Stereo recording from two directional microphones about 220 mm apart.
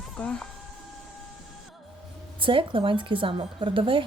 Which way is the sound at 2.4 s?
25° right (ahead or behind).